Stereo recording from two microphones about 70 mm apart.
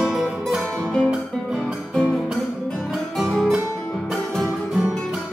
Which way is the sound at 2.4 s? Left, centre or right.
Centre.